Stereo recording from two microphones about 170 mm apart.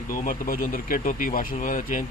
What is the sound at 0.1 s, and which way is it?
Speech, 55° left (ahead or behind).